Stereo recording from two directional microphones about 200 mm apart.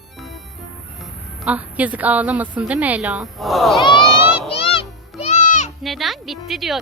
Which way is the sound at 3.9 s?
25° left (ahead or behind).